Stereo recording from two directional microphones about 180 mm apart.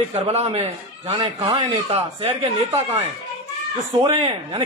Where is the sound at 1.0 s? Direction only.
25° right (ahead or behind).